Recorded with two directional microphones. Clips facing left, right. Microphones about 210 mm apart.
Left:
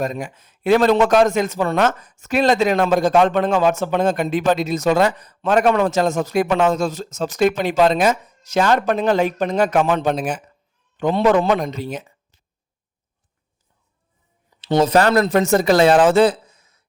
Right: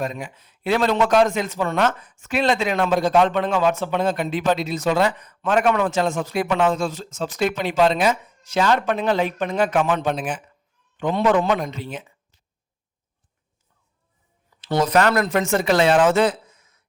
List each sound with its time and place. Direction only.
0.0 s a man's voice: 45° left (ahead or behind)
14.6 s speech: 25° left (ahead or behind)